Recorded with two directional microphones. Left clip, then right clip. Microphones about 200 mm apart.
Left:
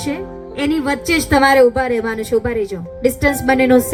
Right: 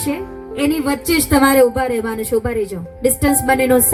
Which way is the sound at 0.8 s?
50° right (ahead or behind).